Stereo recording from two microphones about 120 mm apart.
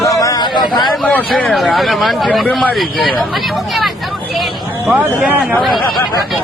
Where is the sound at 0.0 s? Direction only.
30° left (ahead or behind).